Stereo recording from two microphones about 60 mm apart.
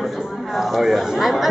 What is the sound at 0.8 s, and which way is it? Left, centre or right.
Speech, centre.